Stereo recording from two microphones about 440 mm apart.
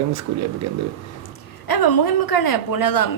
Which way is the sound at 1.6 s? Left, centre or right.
Left.